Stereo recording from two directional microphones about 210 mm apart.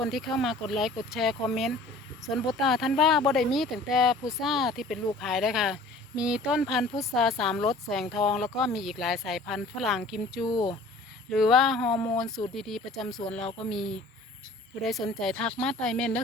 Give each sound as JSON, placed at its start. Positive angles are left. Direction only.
{"t": 0.0, "sound": "speech", "side_deg": 0}
{"t": 10.4, "sound": "speech", "side_deg": 20}
{"t": 11.3, "sound": "speech", "side_deg": 0}